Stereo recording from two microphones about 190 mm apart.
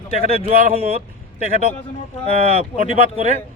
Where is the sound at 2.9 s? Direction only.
35° right (ahead or behind).